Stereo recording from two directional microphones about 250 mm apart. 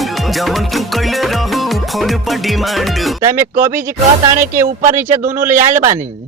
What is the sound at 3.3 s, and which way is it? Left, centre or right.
Speech, centre.